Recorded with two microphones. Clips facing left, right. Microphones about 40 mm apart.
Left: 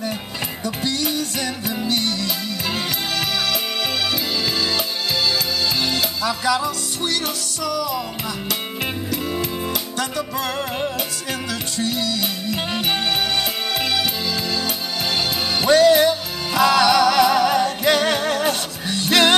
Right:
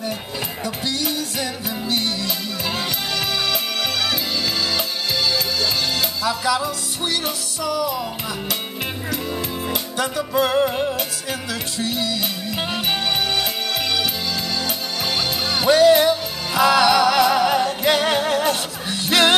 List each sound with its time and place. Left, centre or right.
0.7 s music: centre
5.9 s music: centre
7.6 s music: centre
9.1 s music: centre
9.7 s music: centre
10.7 s music: centre
11.8 s music: centre